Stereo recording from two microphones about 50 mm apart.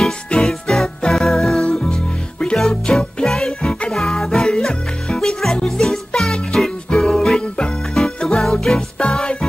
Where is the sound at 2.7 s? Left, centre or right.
Centre.